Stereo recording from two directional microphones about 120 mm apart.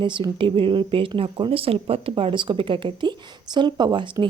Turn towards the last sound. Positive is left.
turn(degrees=-35)  # may be behind; listen again after turning